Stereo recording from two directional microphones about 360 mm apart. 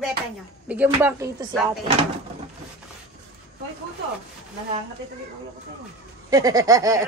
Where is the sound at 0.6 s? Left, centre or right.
Centre.